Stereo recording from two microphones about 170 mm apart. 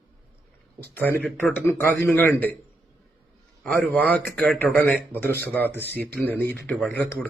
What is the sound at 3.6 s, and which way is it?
Speech, 5° left (ahead or behind).